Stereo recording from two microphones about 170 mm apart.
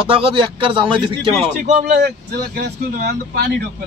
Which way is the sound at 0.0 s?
30° right (ahead or behind).